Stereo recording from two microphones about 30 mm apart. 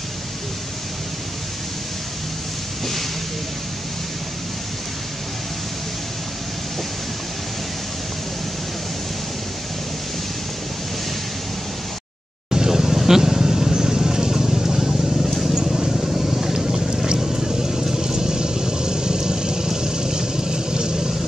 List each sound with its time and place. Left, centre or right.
12.4 s vehicle: right
16.6 s boat: right
17.2 s vehicle: centre